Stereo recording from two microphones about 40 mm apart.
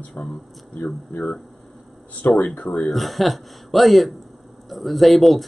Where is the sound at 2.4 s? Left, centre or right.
Left.